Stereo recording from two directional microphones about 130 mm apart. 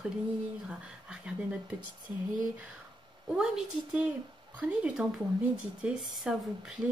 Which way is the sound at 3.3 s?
5° right (ahead or behind).